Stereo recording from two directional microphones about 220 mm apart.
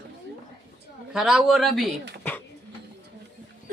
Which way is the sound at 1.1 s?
Centre (ahead or behind).